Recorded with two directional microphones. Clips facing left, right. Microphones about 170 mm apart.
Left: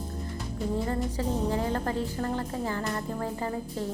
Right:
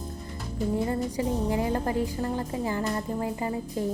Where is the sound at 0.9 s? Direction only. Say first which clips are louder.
Right 2 dB; 15° right (ahead or behind).